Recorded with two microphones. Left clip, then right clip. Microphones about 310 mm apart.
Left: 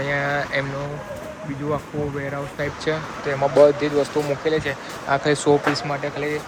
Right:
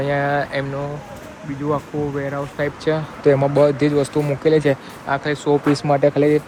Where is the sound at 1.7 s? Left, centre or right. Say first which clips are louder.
Right 4 dB; centre.